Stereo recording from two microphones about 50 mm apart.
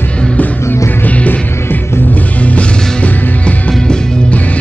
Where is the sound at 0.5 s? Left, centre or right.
Left.